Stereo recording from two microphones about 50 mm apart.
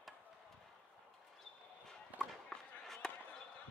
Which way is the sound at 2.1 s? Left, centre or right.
Right.